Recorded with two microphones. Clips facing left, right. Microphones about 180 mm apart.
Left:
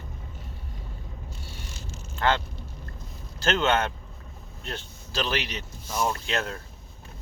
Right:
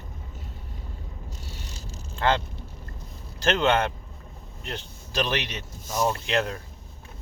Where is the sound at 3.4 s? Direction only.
15° right (ahead or behind).